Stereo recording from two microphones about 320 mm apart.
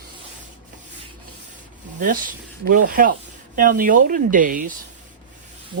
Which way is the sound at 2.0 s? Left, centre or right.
Right.